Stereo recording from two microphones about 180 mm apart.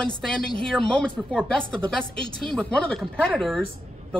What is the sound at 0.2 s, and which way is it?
Speech, 5° left (ahead or behind).